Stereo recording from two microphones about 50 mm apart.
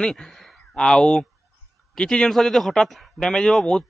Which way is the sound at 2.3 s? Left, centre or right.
Centre.